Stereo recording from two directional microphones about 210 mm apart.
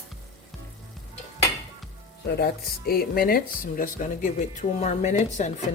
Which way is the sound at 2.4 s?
45° left (ahead or behind).